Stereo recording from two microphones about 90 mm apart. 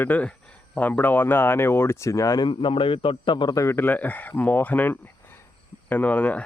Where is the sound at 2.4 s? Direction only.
70° left (ahead or behind).